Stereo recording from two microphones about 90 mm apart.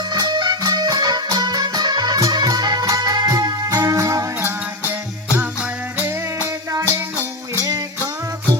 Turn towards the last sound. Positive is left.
turn(degrees=-40)  # may be behind; listen again after turning